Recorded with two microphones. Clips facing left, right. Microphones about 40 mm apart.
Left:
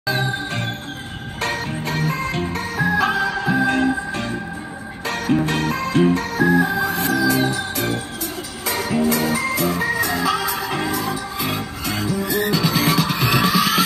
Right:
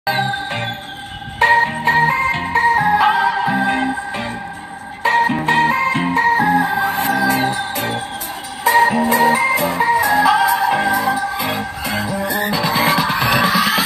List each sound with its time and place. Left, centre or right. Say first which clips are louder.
0.0 s music: right 4 dB; right; by 13.8 s centre